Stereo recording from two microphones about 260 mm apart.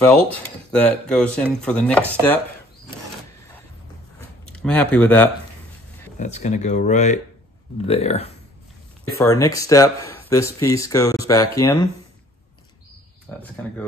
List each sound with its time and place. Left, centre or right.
0.7 s chopping: centre
4.6 s chopping: centre
6.1 s speech: left
9.2 s speech: centre
13.3 s speech: centre